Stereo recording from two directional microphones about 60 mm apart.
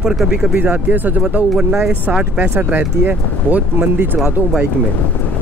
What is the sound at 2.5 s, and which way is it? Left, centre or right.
Speech, right.